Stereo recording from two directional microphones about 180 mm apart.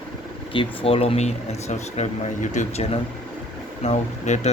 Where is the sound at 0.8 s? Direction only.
35° left (ahead or behind).